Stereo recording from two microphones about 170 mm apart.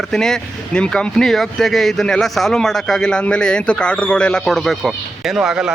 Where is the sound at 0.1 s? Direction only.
5° left (ahead or behind).